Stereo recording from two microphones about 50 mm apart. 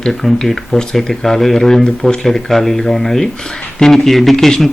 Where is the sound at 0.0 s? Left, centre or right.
Centre.